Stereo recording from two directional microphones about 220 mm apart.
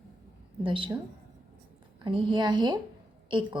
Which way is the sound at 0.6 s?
25° right (ahead or behind).